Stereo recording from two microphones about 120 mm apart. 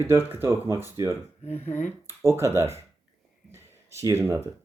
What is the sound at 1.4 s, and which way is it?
Speech, 15° left (ahead or behind).